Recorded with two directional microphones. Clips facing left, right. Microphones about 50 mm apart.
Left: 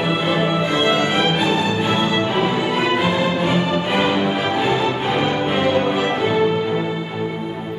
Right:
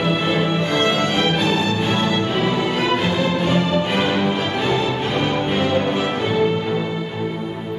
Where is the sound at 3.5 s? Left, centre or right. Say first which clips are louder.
Even; centre.